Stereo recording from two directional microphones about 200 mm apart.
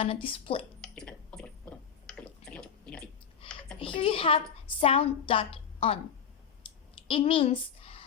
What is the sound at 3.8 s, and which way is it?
A woman's voice, 25° left (ahead or behind).